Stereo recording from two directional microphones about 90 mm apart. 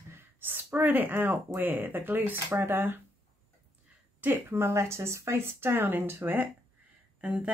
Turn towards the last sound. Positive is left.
turn(degrees=-15)  # may be behind; listen again after turning